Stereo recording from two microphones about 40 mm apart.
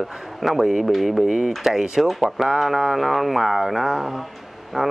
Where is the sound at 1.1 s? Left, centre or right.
Centre.